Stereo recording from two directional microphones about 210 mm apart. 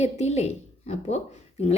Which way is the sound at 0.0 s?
30° left (ahead or behind).